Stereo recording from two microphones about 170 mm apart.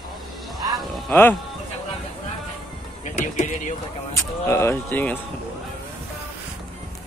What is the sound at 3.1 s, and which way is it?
Speech, 45° left (ahead or behind).